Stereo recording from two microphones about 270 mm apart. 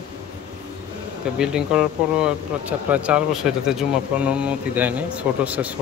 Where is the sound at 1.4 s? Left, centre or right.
Centre.